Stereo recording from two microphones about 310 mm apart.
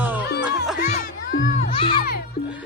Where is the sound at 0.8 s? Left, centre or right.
Left.